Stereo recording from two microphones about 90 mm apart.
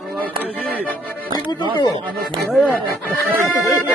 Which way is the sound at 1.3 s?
60° left (ahead or behind).